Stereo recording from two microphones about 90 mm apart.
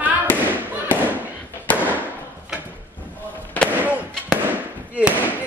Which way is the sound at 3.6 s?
20° left (ahead or behind).